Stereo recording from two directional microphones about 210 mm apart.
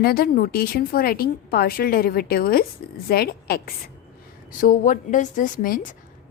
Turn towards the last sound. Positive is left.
turn(degrees=40)  # may be behind; listen again after turning